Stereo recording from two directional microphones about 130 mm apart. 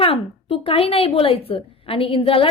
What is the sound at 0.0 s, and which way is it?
A woman's voice, 45° left (ahead or behind).